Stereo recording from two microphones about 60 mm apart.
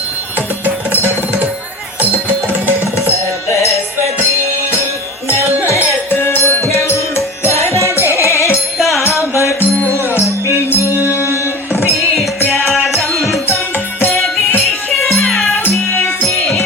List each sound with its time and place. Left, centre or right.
0.3 s music: right
3.0 s music: left
6.1 s music: left
8.8 s music: centre
10.0 s music: right
10.5 s music: left
11.9 s music: centre
13.7 s music: left
14.7 s music: centre